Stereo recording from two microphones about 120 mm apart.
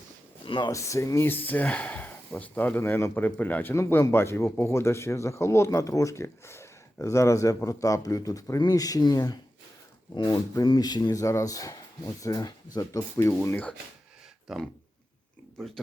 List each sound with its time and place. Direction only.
0.4 s speech: 45° left (ahead or behind)
0.7 s speech: 25° left (ahead or behind)
14.4 s speech: centre (ahead or behind)